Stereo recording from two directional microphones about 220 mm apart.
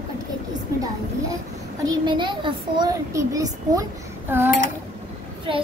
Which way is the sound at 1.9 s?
20° right (ahead or behind).